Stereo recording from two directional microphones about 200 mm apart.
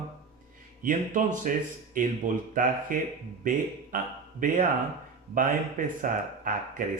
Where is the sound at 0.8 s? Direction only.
40° right (ahead or behind).